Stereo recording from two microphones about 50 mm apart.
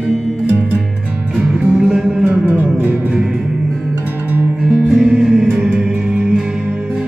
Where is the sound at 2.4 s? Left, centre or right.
Right.